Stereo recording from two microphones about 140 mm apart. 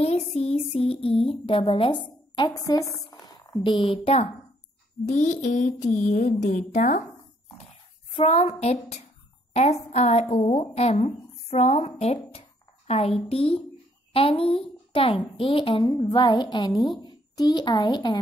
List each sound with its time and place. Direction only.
0.4 s speech: 45° left (ahead or behind); by 2.9 s 25° left (ahead or behind)
3.1 s a sound: 25° left (ahead or behind)
3.6 s speech: 40° left (ahead or behind)
5.0 s speech: 60° left (ahead or behind)
8.1 s a woman's voice: 45° left (ahead or behind); by 18.2 s 30° left (ahead or behind)